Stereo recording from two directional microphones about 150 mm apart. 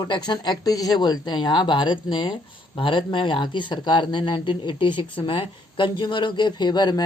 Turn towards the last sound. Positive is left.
turn(degrees=30)  # may be behind; listen again after turning